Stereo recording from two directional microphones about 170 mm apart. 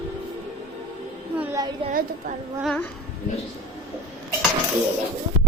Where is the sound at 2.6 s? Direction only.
Centre (ahead or behind).